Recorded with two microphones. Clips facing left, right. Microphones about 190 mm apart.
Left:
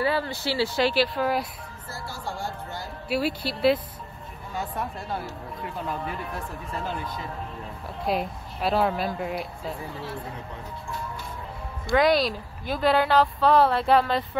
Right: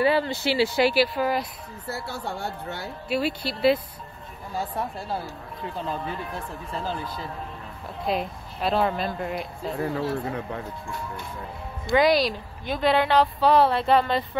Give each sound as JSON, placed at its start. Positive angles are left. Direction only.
{"t": 0.0, "sound": "speech", "side_deg": -20}
{"t": 1.9, "sound": "a woman's voice", "side_deg": -65}
{"t": 3.1, "sound": "a woman's voice", "side_deg": 5}
{"t": 4.6, "sound": "speech", "side_deg": -30}
{"t": 8.1, "sound": "a woman's voice", "side_deg": 5}
{"t": 11.9, "sound": "a woman's voice", "side_deg": 0}